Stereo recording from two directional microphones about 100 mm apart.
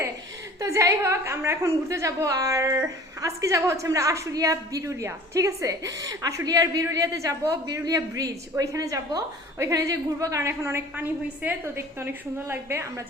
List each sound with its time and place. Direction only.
0.6 s a woman's voice: 30° right (ahead or behind)